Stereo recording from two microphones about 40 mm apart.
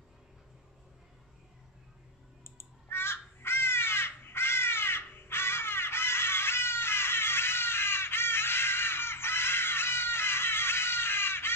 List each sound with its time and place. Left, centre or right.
2.4 s crow: left